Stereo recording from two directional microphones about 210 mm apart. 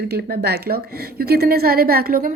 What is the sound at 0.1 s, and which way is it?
A woman's voice, 50° right (ahead or behind).